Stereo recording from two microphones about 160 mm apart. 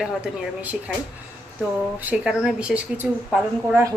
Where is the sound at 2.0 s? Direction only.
5° right (ahead or behind).